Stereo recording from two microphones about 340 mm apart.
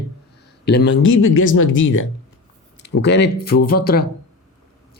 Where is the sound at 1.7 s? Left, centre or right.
Left.